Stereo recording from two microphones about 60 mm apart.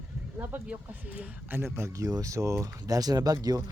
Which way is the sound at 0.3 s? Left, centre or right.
Right.